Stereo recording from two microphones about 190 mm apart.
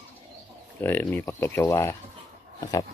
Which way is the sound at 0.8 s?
10° left (ahead or behind).